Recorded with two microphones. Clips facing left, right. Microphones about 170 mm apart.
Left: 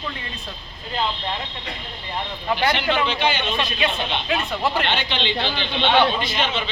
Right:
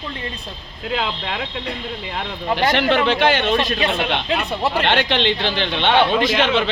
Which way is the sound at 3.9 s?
70° right (ahead or behind).